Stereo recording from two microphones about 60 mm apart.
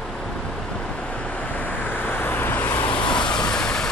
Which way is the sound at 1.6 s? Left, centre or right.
Left.